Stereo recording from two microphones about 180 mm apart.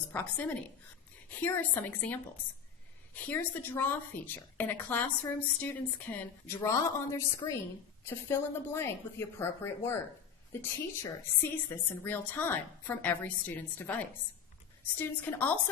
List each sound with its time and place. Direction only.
0.1 s a woman's voice: 10° left (ahead or behind)
3.2 s a woman's voice: 10° left (ahead or behind)